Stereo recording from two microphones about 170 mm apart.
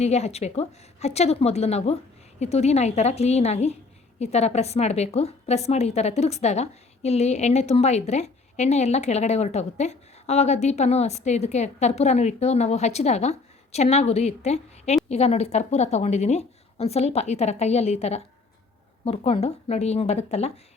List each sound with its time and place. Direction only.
0.0 s a woman's voice: 40° left (ahead or behind)